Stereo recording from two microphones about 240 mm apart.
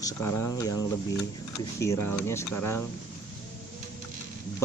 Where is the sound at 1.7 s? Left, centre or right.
Centre.